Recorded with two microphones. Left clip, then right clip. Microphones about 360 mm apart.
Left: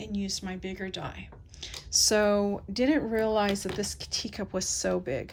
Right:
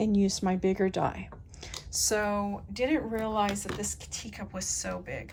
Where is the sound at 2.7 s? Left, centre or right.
Left.